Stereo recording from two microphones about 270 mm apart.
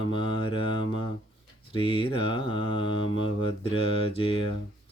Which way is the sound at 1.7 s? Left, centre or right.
Centre.